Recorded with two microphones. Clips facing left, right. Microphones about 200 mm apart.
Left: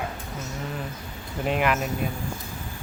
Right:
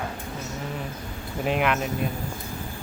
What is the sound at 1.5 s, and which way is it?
Speech, centre (ahead or behind).